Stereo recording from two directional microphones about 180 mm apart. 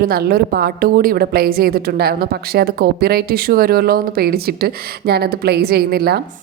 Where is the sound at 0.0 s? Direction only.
55° right (ahead or behind).